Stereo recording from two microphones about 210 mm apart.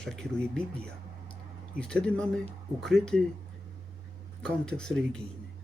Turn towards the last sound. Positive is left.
turn(degrees=0)  # may be behind; listen again after turning